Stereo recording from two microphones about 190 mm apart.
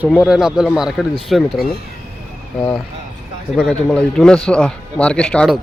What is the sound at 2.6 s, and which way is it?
Speech, 20° left (ahead or behind).